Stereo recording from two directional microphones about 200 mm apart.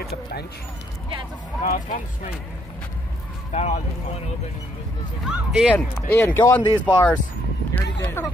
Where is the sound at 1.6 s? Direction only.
40° left (ahead or behind).